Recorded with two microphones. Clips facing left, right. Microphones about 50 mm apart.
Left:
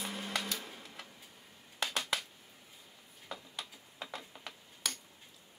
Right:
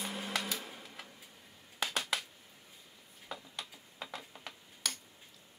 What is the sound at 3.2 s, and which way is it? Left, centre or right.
Tick-tock, centre.